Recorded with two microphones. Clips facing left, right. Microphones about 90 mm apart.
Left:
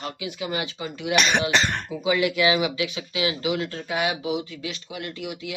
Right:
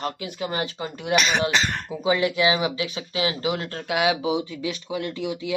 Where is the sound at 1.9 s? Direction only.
30° right (ahead or behind).